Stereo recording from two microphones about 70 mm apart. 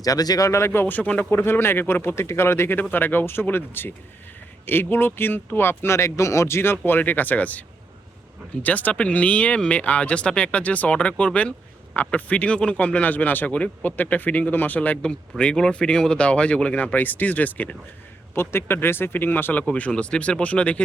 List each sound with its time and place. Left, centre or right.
0.0 s speech: left
1.0 s speech: centre
1.3 s speech: left
6.6 s speech: left
8.6 s speech: left
18.3 s speech: left
19.6 s speech: centre